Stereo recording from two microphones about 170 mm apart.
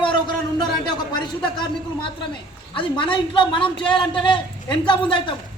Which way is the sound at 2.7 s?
30° left (ahead or behind).